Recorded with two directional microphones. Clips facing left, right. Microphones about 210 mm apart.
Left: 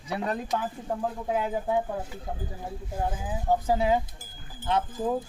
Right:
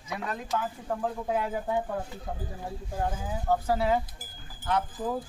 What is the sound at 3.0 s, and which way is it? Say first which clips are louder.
Speech: left 1 dB; 10° left (ahead or behind).